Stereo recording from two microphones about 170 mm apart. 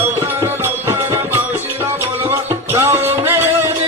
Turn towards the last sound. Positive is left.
turn(degrees=-15)  # may be behind; listen again after turning